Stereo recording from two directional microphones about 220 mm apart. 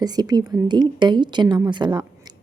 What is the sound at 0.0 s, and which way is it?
A woman's voice, 15° right (ahead or behind).